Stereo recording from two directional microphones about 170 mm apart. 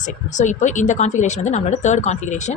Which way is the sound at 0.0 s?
45° left (ahead or behind).